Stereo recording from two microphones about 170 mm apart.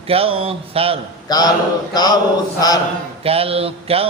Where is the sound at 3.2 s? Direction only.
35° right (ahead or behind).